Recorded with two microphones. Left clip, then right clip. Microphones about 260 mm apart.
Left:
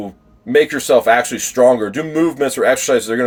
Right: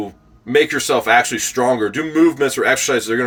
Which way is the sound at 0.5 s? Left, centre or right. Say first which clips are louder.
Left 3 dB; centre.